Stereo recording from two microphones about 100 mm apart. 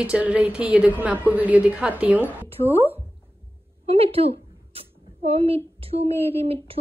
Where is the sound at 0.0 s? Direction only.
10° right (ahead or behind).